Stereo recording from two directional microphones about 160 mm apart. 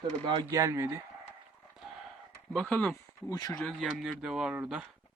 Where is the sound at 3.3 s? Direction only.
25° left (ahead or behind).